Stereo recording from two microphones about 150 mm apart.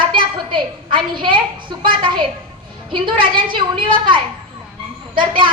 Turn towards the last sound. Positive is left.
turn(degrees=-35)  # may be behind; listen again after turning